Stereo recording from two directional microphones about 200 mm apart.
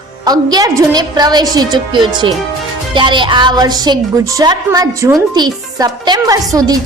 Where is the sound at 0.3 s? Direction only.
20° right (ahead or behind).